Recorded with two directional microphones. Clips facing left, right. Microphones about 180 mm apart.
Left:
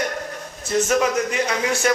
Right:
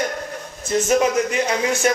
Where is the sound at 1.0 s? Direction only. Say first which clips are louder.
Right 2 dB; 25° right (ahead or behind).